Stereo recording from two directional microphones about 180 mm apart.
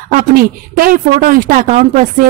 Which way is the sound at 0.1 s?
55° right (ahead or behind).